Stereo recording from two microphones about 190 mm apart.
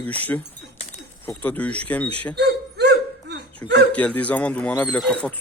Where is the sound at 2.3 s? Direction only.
60° right (ahead or behind).